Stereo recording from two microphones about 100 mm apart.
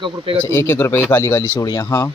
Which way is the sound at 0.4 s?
20° left (ahead or behind).